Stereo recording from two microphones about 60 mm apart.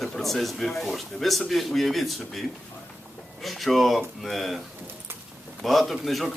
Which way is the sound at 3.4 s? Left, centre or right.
Centre.